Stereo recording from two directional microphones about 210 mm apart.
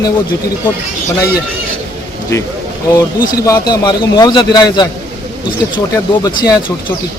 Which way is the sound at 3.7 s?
20° left (ahead or behind).